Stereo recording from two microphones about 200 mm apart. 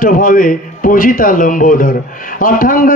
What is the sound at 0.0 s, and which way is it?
Speech, 45° left (ahead or behind).